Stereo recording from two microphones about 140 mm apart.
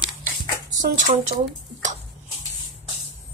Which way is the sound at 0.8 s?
65° right (ahead or behind).